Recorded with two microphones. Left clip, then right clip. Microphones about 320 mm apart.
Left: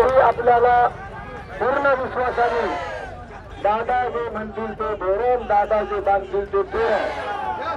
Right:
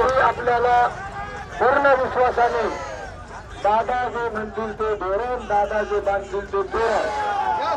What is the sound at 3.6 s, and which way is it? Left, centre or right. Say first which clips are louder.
Speech: even; centre.